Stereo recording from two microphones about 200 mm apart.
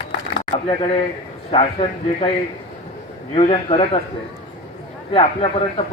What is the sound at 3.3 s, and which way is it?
Speech, 25° left (ahead or behind).